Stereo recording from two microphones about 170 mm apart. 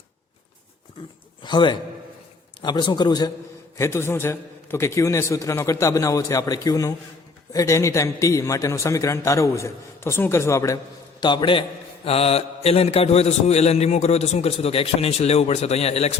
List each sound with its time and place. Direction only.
1.4 s a man's voice: 25° left (ahead or behind)